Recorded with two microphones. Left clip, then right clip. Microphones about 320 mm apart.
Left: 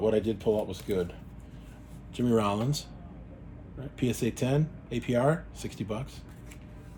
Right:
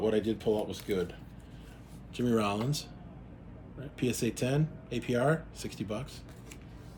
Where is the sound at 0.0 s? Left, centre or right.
Centre.